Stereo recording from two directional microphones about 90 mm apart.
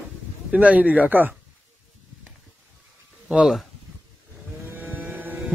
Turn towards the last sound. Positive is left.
turn(degrees=-25)  # may be behind; listen again after turning